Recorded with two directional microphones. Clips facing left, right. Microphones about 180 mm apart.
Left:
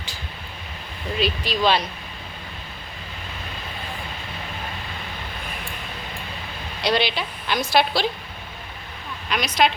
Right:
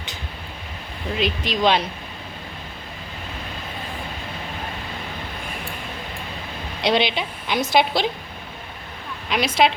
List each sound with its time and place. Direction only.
1.2 s a woman's voice: 20° right (ahead or behind)
6.8 s a woman's voice: 20° right (ahead or behind)
9.3 s a woman's voice: 25° right (ahead or behind)